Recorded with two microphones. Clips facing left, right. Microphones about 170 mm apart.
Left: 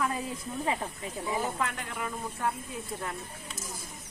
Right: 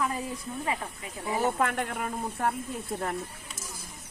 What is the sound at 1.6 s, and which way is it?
Speech, 55° right (ahead or behind).